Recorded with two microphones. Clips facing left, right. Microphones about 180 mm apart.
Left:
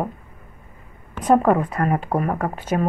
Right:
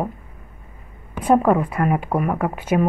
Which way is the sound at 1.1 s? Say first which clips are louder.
Even; 10° right (ahead or behind).